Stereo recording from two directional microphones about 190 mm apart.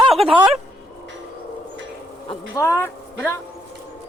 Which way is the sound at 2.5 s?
15° left (ahead or behind).